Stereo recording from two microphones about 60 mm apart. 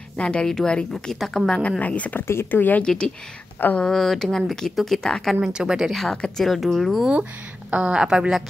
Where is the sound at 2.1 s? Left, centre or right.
Left.